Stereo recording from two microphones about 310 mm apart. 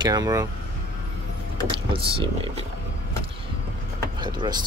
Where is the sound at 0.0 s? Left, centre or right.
Centre.